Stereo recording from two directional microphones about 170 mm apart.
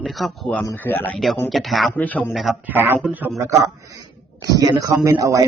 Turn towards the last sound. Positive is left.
turn(degrees=-20)  # may be behind; listen again after turning